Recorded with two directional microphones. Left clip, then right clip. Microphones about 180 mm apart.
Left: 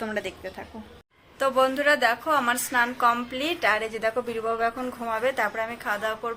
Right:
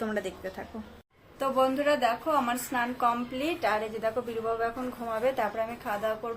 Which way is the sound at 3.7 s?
20° left (ahead or behind).